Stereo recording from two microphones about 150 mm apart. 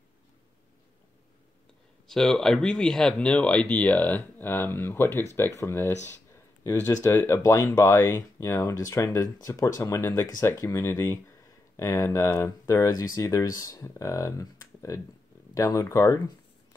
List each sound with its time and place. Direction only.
2.0 s speech: 5° left (ahead or behind); by 16.2 s 20° left (ahead or behind)